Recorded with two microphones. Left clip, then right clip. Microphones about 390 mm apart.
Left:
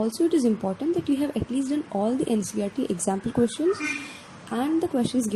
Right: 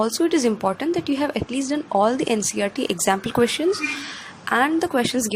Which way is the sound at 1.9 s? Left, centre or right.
Right.